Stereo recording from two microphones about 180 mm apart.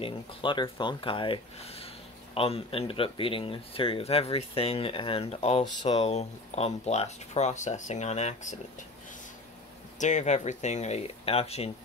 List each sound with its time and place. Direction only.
0.0 s speech: 25° left (ahead or behind)
9.9 s speech: 40° left (ahead or behind)